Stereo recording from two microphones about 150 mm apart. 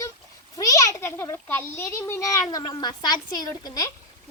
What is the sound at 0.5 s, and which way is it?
A child's voice, 25° left (ahead or behind).